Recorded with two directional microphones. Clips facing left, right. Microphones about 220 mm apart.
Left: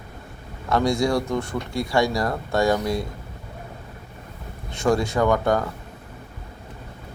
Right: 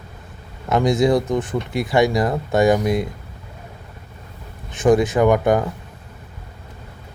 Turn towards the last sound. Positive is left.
turn(degrees=-20)  # may be behind; listen again after turning